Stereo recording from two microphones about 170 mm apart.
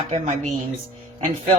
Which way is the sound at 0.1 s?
40° right (ahead or behind).